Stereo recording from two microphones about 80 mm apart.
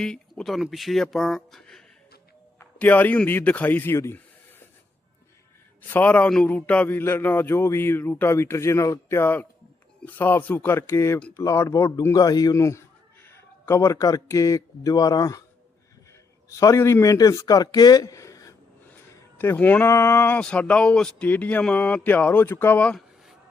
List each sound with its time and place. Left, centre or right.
0.0 s speech: centre
2.7 s a man's voice: left
5.9 s a man's voice: centre; by 11.9 s left
12.1 s speech: left
16.6 s speech: left
19.4 s a man's voice: left
19.9 s speech: left
20.4 s a man's voice: centre